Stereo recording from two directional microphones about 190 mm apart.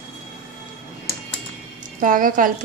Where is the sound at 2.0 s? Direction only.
45° right (ahead or behind).